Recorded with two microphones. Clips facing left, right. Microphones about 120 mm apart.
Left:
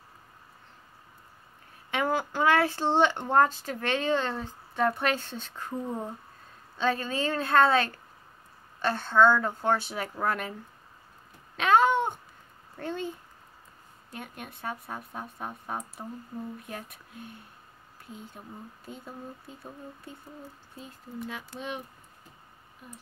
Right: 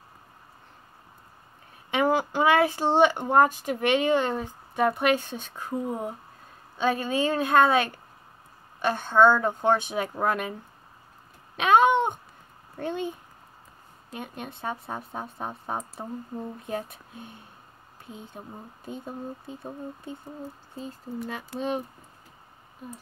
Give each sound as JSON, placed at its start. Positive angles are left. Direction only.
{"t": 1.9, "sound": "speech", "side_deg": -20}
{"t": 11.5, "sound": "speech", "side_deg": -20}
{"t": 14.1, "sound": "speech", "side_deg": -20}
{"t": 21.3, "sound": "speech", "side_deg": -40}